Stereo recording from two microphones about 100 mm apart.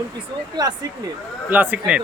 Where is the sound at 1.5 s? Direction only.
15° right (ahead or behind).